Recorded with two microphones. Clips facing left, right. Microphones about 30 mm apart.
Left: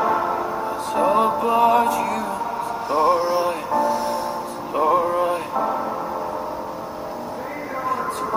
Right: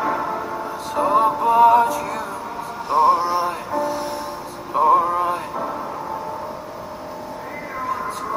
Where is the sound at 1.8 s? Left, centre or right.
Left.